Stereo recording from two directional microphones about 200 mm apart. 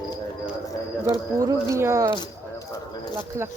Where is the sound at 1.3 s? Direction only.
15° right (ahead or behind).